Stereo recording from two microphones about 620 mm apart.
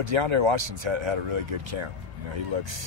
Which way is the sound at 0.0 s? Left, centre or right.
Right.